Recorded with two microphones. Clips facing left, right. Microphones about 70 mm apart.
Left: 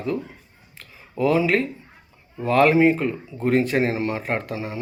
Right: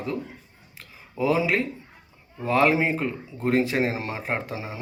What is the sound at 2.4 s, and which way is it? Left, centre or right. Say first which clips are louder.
Speech: left 5 dB; centre.